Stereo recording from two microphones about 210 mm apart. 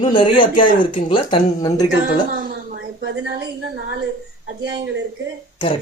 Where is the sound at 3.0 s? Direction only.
55° right (ahead or behind).